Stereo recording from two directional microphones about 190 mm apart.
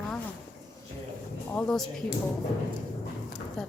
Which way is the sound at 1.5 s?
5° left (ahead or behind).